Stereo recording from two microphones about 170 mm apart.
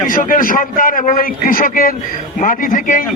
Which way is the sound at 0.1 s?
55° left (ahead or behind).